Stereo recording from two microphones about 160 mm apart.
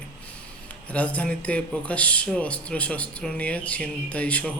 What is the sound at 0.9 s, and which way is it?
A man's voice, 10° left (ahead or behind).